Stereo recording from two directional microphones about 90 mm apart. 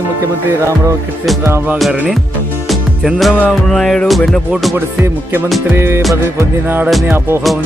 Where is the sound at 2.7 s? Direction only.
Centre (ahead or behind).